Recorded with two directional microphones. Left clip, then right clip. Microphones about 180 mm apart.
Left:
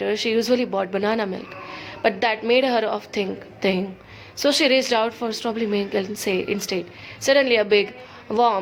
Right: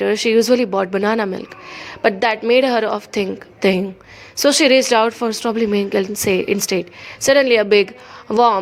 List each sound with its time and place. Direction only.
0.0 s speech: 40° right (ahead or behind)